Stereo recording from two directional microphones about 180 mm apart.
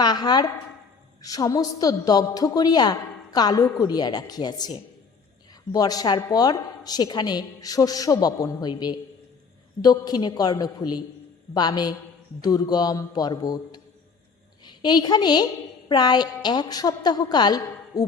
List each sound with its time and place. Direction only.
0.0 s a woman's voice: 25° left (ahead or behind)